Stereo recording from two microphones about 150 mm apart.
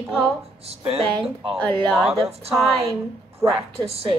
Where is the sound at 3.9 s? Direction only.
40° right (ahead or behind).